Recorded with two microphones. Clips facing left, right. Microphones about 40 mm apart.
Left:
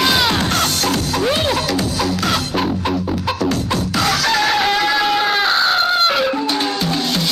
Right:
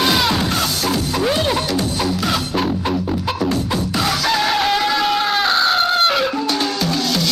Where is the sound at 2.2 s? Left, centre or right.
Centre.